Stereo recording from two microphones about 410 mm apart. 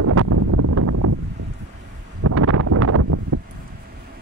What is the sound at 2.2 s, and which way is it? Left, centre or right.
Wind noise, right.